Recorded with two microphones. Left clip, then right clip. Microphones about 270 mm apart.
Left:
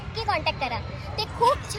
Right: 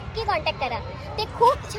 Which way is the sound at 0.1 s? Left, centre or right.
Centre.